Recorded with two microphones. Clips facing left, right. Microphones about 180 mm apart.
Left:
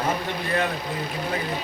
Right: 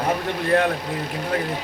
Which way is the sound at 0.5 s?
60° right (ahead or behind).